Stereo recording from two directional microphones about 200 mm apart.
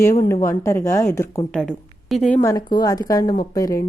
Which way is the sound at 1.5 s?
Centre (ahead or behind).